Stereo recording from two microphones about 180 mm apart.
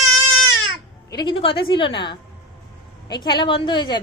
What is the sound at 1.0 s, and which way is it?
Speech, 25° left (ahead or behind).